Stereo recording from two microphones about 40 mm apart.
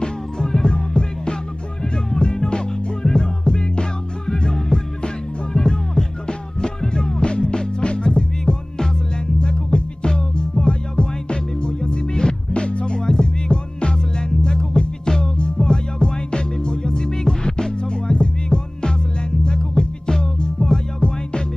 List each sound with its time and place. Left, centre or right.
0.0 s music: centre
21.0 s music: left